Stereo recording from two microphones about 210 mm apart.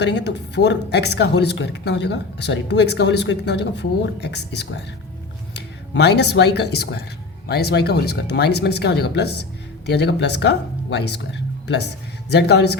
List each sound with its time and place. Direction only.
0.0 s speech: 55° left (ahead or behind)